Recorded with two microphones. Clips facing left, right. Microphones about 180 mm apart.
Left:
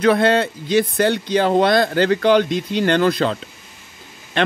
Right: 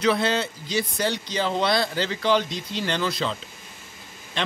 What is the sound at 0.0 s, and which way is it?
A man's voice, 55° left (ahead or behind).